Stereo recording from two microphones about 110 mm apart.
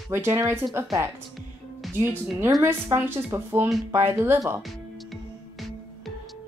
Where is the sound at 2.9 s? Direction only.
20° right (ahead or behind).